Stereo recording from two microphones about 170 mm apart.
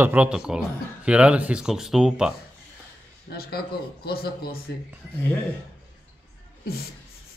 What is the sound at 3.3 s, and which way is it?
Speech, 65° left (ahead or behind).